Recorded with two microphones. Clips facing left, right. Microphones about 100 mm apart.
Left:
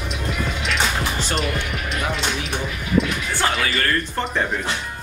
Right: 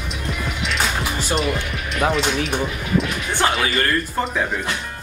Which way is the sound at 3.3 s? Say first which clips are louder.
Right 4 dB; 20° right (ahead or behind).